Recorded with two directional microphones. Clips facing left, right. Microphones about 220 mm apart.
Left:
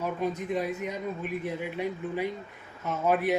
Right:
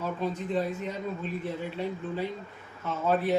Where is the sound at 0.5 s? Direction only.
15° left (ahead or behind).